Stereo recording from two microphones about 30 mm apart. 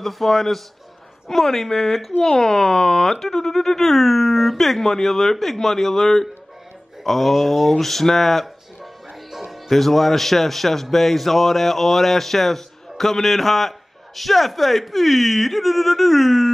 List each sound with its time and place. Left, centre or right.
0.0 s speech: centre
2.2 s a man's voice: left; by 8.5 s centre
9.3 s music: centre
9.7 s a man's voice: centre